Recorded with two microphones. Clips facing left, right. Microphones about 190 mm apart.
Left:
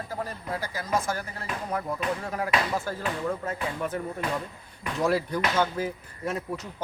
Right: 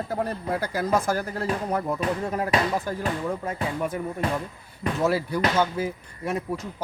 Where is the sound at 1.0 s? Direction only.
35° right (ahead or behind).